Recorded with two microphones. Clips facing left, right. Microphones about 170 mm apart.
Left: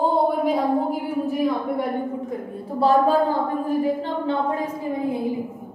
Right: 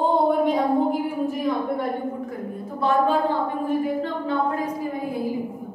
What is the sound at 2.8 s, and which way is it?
Speech, 35° left (ahead or behind).